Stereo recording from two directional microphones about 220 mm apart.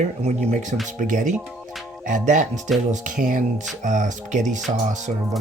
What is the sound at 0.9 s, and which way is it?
Speech, 35° right (ahead or behind).